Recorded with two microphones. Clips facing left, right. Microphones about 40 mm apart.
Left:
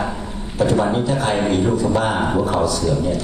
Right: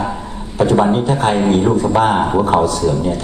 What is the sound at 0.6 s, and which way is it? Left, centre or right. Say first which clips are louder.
A man's voice: right 4 dB; right.